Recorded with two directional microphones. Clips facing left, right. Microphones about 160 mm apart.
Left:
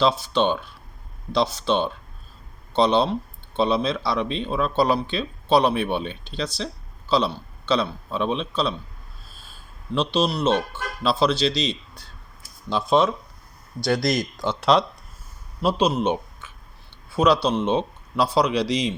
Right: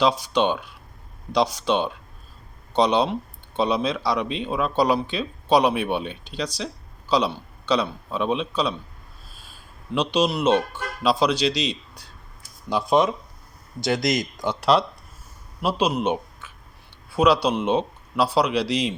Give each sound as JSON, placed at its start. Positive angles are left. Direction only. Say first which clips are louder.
{"t": 0.0, "sound": "speech", "louder": "even", "side_deg": -10}
{"t": 9.9, "sound": "speech", "louder": "right 1 dB", "side_deg": -10}